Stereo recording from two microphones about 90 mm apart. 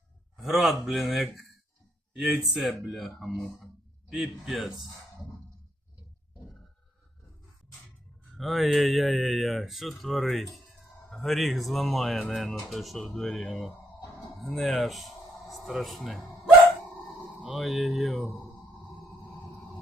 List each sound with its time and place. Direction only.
0.3 s speech: centre (ahead or behind)
8.4 s speech: centre (ahead or behind)
17.4 s speech: centre (ahead or behind)